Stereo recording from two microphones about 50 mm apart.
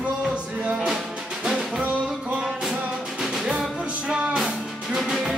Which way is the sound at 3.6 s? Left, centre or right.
Centre.